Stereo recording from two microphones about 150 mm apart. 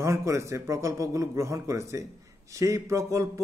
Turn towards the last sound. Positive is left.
turn(degrees=-20)  # may be behind; listen again after turning